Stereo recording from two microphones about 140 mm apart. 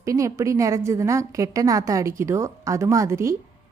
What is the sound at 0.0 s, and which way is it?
A woman's voice, 20° right (ahead or behind).